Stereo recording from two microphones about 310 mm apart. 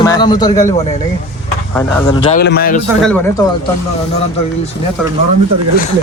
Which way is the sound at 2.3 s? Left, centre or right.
Left.